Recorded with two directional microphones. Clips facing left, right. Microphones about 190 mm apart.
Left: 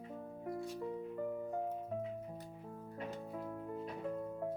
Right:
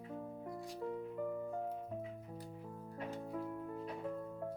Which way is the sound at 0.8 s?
15° left (ahead or behind).